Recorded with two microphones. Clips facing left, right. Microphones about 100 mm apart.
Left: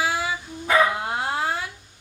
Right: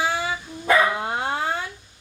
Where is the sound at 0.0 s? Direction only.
5° left (ahead or behind).